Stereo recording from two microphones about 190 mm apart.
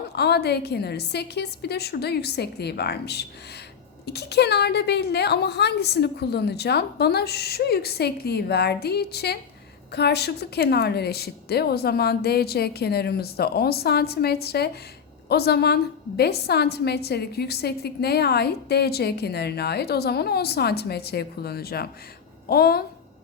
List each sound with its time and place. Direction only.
0.2 s a woman's voice: 60° left (ahead or behind)